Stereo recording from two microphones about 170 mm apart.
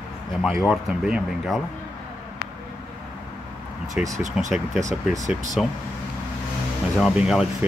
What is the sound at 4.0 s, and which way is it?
Speech, 5° right (ahead or behind).